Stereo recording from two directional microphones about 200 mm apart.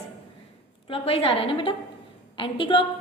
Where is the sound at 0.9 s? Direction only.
30° left (ahead or behind).